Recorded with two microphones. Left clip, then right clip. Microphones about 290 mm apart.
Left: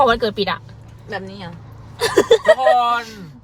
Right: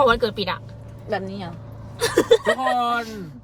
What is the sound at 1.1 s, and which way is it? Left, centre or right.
Speech, centre.